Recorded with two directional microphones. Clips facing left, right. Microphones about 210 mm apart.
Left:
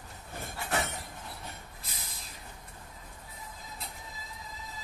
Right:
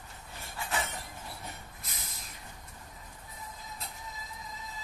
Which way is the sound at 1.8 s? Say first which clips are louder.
Even; 30° left (ahead or behind).